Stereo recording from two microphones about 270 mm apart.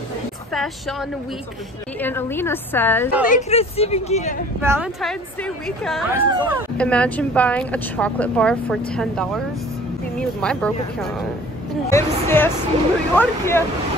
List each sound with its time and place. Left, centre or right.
0.5 s a woman's voice: centre
2.0 s a woman's voice: centre
3.3 s speech: left
4.6 s a woman's voice: centre
10.4 s a woman's voice: centre
11.9 s a sound: centre
13.1 s a woman's voice: centre